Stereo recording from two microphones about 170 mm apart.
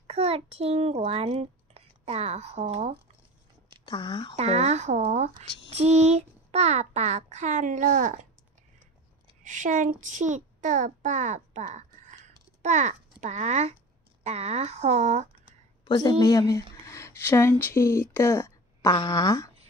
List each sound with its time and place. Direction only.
0.0 s a child's voice: 35° right (ahead or behind)
3.8 s speech: 30° left (ahead or behind)
4.4 s a child's voice: 40° right (ahead or behind)
9.4 s a child's voice: 50° right (ahead or behind)
15.8 s speech: 25° left (ahead or behind)